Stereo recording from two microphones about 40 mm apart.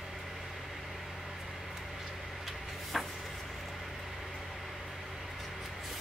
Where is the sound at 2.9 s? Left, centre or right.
Centre.